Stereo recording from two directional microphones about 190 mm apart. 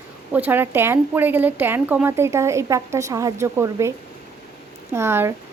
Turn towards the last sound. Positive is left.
turn(degrees=-15)  # may be behind; listen again after turning